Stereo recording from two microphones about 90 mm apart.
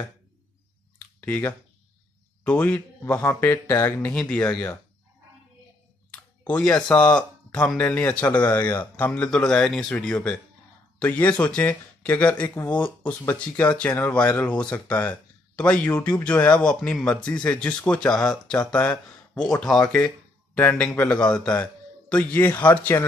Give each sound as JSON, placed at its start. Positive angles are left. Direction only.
{"t": 1.2, "sound": "speech", "side_deg": 20}
{"t": 4.1, "sound": "speech", "side_deg": 10}
{"t": 6.1, "sound": "a sound", "side_deg": 15}
{"t": 6.9, "sound": "speech", "side_deg": 10}
{"t": 20.5, "sound": "speech", "side_deg": 15}